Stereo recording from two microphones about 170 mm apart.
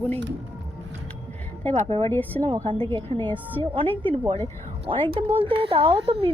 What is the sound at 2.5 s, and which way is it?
Speech, 25° right (ahead or behind).